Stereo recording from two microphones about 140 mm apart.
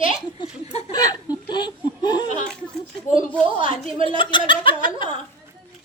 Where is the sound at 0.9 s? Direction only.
25° left (ahead or behind).